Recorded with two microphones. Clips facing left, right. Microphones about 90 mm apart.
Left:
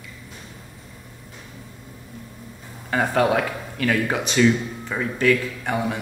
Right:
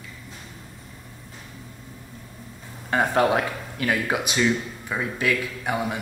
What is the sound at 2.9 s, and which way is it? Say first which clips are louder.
Speech: even; 25° right (ahead or behind).